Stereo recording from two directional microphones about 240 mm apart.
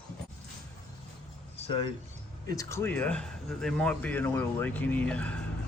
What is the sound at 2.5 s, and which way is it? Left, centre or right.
Speech, centre.